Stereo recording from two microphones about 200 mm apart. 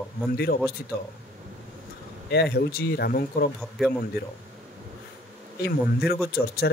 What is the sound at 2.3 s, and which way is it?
Speech, 55° left (ahead or behind).